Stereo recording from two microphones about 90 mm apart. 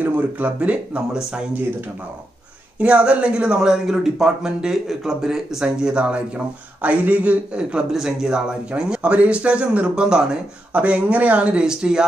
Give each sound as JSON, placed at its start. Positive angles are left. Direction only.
{"t": 0.0, "sound": "speech", "side_deg": -15}
{"t": 2.8, "sound": "speech", "side_deg": -15}